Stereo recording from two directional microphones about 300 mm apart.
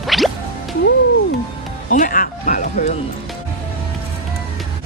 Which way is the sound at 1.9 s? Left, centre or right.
Left.